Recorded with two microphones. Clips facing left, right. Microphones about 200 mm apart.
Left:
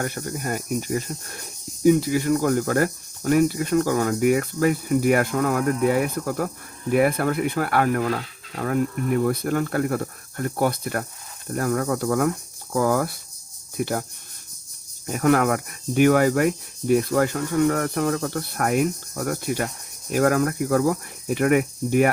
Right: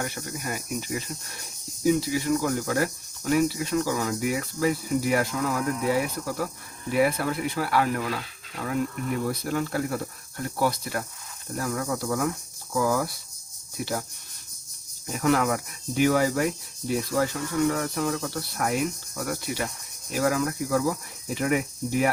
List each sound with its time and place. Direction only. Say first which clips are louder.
0.0 s speech: left 5 dB; 50° left (ahead or behind)
15.0 s speech: left 4 dB; 55° left (ahead or behind)